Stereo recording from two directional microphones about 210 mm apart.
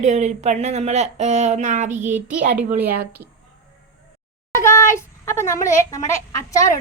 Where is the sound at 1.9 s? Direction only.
10° right (ahead or behind).